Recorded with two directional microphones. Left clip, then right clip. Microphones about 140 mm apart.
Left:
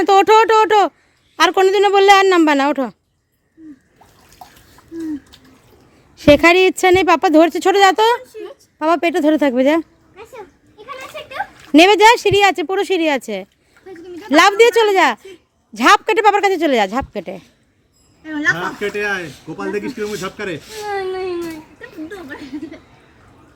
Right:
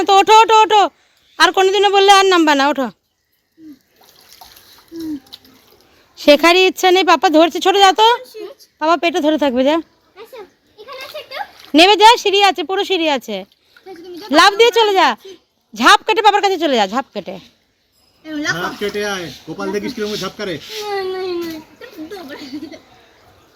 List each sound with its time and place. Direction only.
0.0 s a woman's voice: 40° left (ahead or behind); by 2.9 s 20° left (ahead or behind)
6.2 s a woman's voice: 25° left (ahead or behind)
11.7 s a woman's voice: 35° left (ahead or behind)
18.5 s speech: 5° right (ahead or behind)
19.1 s a woman's voice: 30° left (ahead or behind)
19.7 s speech: centre (ahead or behind)
20.9 s baby cry: centre (ahead or behind)